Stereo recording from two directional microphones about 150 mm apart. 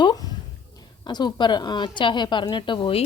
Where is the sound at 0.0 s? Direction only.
25° left (ahead or behind).